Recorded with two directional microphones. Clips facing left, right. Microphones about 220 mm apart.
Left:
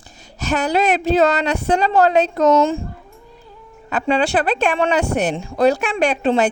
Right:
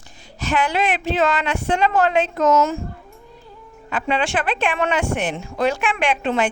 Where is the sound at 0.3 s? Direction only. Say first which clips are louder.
Left 3 dB; 40° left (ahead or behind).